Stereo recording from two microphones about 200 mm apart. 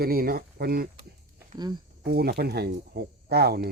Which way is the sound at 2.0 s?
50° right (ahead or behind).